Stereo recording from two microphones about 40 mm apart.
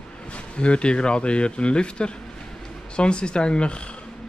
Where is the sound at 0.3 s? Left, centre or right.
Left.